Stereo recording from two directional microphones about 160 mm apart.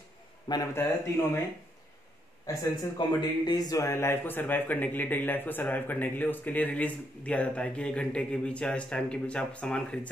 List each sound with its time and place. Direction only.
0.5 s speech: 20° left (ahead or behind)
2.4 s a man's voice: 25° left (ahead or behind); by 9.9 s 5° left (ahead or behind)